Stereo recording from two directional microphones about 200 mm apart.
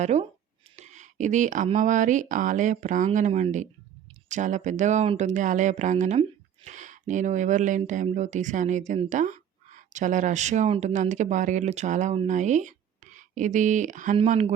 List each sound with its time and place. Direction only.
0.0 s speech: 35° right (ahead or behind)